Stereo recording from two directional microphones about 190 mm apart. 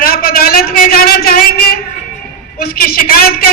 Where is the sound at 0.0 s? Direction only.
50° left (ahead or behind).